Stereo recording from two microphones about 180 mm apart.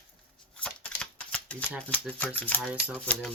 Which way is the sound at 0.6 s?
5° left (ahead or behind).